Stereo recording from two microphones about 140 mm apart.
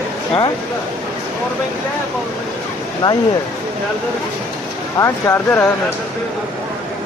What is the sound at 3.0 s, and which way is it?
Speech, 35° left (ahead or behind).